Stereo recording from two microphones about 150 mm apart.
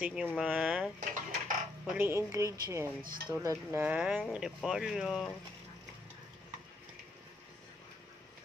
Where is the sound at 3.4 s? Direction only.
15° right (ahead or behind).